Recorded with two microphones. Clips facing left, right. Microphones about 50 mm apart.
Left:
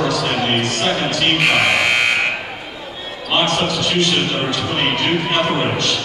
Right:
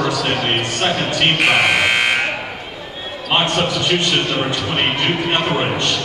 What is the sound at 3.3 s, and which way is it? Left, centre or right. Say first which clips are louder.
Speech: even; right.